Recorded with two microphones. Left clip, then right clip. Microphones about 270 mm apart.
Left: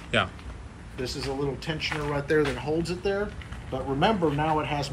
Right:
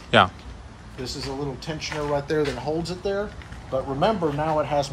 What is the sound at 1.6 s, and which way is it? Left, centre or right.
A man's voice, centre.